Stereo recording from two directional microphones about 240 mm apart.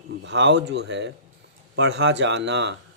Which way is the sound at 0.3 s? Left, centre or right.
Right.